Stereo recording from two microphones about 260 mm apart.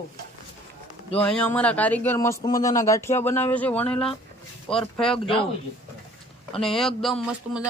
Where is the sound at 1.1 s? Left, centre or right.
Centre.